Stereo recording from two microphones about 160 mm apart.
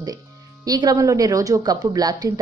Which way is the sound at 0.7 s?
25° right (ahead or behind).